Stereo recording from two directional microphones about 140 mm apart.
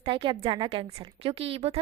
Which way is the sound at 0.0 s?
35° right (ahead or behind).